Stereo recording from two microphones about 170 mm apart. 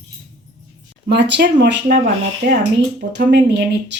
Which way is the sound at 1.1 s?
90° right.